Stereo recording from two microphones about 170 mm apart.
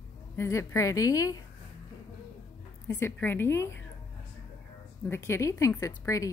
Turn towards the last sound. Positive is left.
turn(degrees=20)  # may be behind; listen again after turning